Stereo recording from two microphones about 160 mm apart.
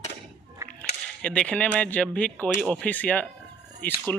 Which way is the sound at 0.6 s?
20° right (ahead or behind).